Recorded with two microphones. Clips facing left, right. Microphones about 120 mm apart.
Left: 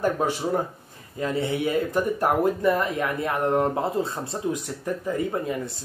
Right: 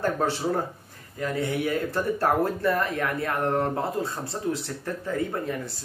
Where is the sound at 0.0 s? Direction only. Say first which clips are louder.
Left 1 dB; 15° left (ahead or behind).